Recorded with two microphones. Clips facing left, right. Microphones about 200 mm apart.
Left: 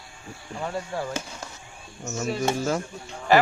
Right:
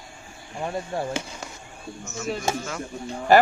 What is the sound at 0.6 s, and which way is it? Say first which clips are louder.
Speech: right 2 dB; 15° right (ahead or behind).